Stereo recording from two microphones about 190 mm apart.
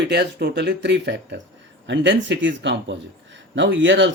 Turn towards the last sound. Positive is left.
turn(degrees=-75)  # may be behind; listen again after turning